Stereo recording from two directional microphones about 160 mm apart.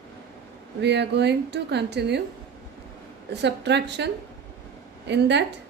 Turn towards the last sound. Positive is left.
turn(degrees=-90)